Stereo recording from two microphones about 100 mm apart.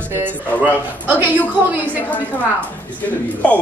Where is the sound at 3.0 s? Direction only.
15° left (ahead or behind).